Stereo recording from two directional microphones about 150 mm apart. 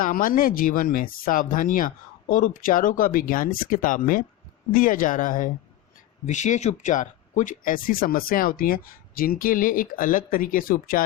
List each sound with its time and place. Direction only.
0.0 s speech: 65° left (ahead or behind)